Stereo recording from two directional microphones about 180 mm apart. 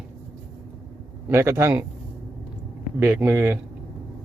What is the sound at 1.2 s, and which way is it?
Speech, 15° right (ahead or behind).